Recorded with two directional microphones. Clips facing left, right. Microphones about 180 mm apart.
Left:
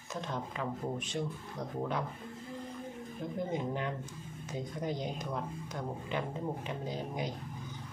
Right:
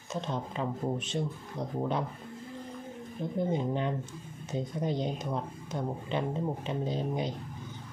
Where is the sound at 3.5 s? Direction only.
25° right (ahead or behind).